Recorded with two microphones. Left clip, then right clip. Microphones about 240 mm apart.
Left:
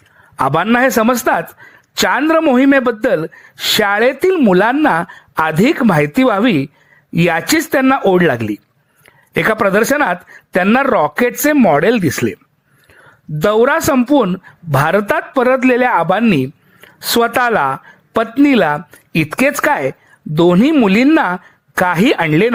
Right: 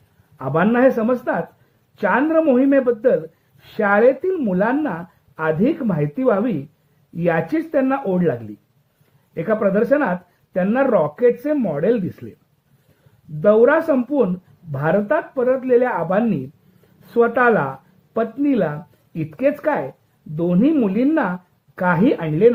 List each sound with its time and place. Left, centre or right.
0.3 s a woman's voice: left
13.4 s a woman's voice: left